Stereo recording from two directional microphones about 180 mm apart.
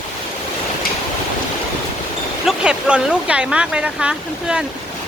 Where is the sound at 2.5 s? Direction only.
5° right (ahead or behind).